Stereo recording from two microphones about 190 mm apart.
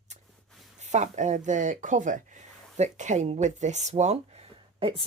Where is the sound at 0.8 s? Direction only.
40° right (ahead or behind).